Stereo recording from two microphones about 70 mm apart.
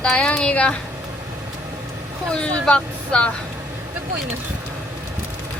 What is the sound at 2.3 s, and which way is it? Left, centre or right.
Speech, centre.